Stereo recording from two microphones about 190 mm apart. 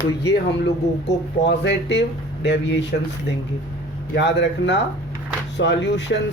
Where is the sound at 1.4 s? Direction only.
65° left (ahead or behind).